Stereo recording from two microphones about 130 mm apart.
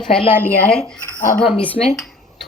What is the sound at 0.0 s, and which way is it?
Speech, 5° left (ahead or behind).